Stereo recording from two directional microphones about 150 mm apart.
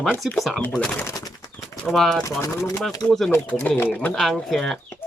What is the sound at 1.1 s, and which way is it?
Bird, 25° left (ahead or behind).